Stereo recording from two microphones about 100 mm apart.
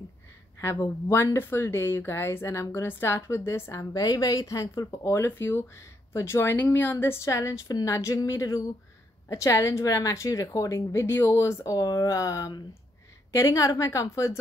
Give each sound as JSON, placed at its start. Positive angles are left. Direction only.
{"t": 0.6, "sound": "speech", "side_deg": 30}
{"t": 3.9, "sound": "a woman's voice", "side_deg": 40}